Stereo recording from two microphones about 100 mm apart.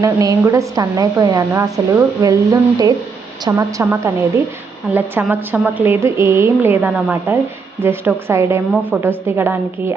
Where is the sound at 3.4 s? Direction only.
35° right (ahead or behind).